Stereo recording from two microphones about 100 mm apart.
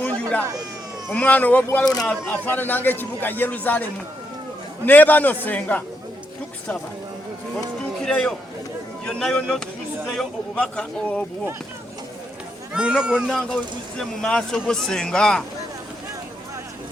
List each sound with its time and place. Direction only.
0.0 s a sound: 15° left (ahead or behind)
1.1 s speech: 15° left (ahead or behind)
1.8 s speech: 40° left (ahead or behind)
2.0 s speech: 15° left (ahead or behind)
4.9 s speech: 15° left (ahead or behind)
8.0 s a man's voice: 10° left (ahead or behind)
12.7 s speech: 10° right (ahead or behind)
14.0 s speech: 5° left (ahead or behind)